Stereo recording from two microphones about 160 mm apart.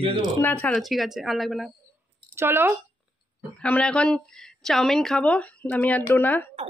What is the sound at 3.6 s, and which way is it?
Speech, 5° left (ahead or behind).